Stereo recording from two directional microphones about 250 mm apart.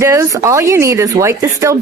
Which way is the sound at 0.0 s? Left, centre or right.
Centre.